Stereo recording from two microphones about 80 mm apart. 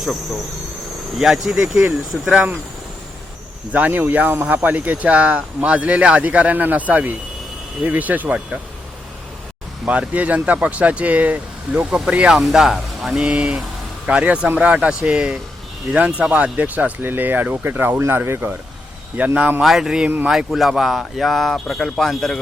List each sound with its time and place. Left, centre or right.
1.2 s speech: centre
3.7 s speech: centre
9.8 s speech: centre
19.6 s speech: centre